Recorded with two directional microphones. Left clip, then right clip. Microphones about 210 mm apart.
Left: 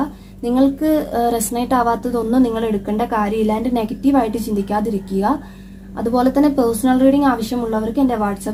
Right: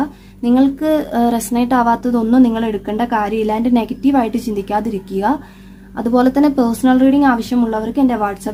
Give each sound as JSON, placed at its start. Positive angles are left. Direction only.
{"t": 0.4, "sound": "a woman's voice", "side_deg": -30}